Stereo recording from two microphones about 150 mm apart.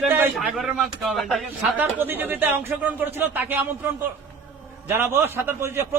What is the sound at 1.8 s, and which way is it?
Speech, 15° right (ahead or behind).